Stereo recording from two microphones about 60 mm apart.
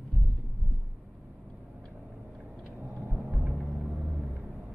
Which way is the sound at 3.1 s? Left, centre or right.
Right.